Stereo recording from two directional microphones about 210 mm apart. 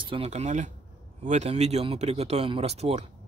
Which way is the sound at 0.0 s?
25° right (ahead or behind).